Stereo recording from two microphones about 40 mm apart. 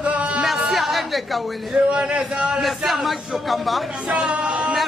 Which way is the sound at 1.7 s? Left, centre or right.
Right.